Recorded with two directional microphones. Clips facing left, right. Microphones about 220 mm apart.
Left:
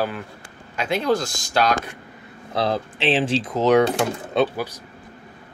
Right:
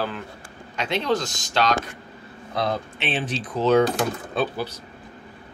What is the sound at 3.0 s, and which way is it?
Speech, 90° left.